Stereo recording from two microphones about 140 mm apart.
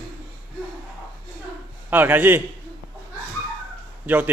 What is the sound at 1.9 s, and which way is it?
Speech, 15° right (ahead or behind).